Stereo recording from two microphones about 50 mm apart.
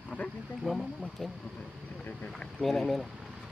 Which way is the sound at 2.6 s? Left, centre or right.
Centre.